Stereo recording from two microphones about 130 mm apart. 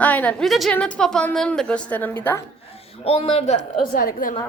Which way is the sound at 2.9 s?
50° left (ahead or behind).